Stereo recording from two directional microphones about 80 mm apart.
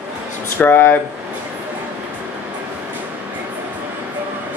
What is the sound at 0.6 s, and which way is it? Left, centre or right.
Speech, left.